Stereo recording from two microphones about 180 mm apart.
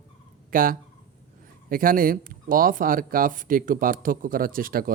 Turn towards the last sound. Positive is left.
turn(degrees=-55)  # may be behind; listen again after turning